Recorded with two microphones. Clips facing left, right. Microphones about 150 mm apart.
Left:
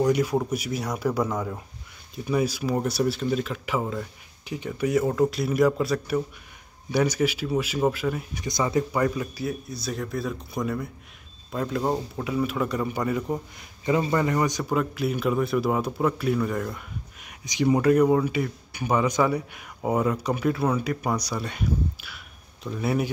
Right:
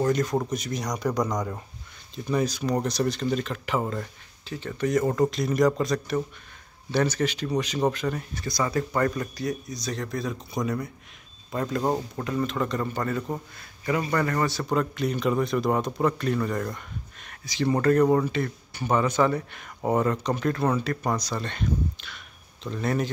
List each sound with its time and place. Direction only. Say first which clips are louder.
0.0 s a man's voice: left 2 dB; 10° left (ahead or behind)
8.5 s speech: left 2 dB; 20° left (ahead or behind)
8.9 s a man's voice: left 1 dB; 10° left (ahead or behind)
14.6 s a man's voice: even; 5° left (ahead or behind)